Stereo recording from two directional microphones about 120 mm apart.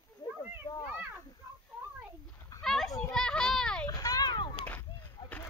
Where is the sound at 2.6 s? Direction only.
5° left (ahead or behind).